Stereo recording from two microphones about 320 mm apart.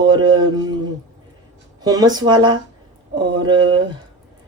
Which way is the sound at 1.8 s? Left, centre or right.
Centre.